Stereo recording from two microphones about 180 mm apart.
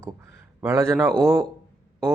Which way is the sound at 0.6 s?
15° right (ahead or behind).